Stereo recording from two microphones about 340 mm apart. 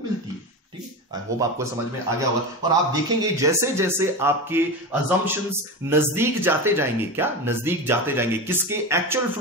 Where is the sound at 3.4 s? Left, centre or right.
Centre.